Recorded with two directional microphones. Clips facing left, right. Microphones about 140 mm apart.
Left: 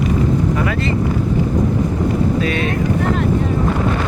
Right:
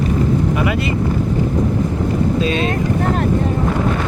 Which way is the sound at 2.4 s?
25° right (ahead or behind).